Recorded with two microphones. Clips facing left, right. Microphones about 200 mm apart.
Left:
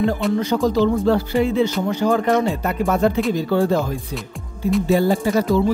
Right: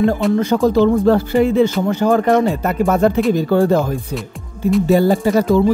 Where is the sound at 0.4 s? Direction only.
50° right (ahead or behind).